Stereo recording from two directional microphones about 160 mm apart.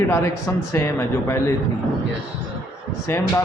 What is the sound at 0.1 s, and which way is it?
Speech, 20° left (ahead or behind).